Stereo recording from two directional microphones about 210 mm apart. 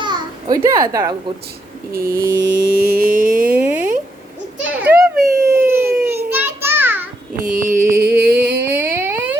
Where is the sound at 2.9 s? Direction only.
40° right (ahead or behind).